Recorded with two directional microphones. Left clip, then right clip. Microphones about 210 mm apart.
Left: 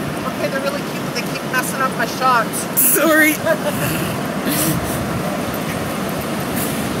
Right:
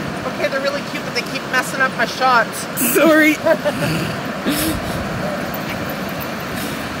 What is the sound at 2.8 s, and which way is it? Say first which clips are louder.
Speech: right 2 dB; 10° right (ahead or behind).